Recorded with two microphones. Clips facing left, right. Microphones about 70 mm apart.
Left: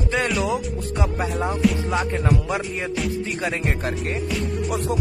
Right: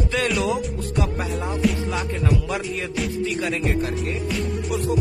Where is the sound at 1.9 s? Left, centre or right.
Left.